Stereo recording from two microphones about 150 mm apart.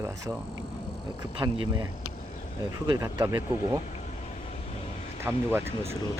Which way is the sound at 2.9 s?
25° right (ahead or behind).